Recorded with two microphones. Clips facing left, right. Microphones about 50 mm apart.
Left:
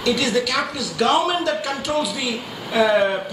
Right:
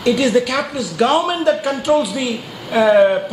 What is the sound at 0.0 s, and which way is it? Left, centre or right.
Speech, right.